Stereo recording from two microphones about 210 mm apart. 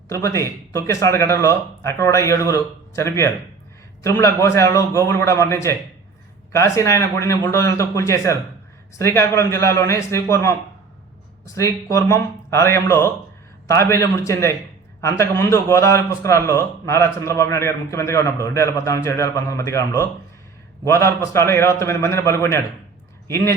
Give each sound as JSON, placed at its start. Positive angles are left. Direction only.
{"t": 0.1, "sound": "a man's voice", "side_deg": 15}
{"t": 11.5, "sound": "a man's voice", "side_deg": 15}